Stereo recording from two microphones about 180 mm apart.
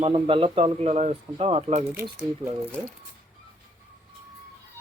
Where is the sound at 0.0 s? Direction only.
30° right (ahead or behind).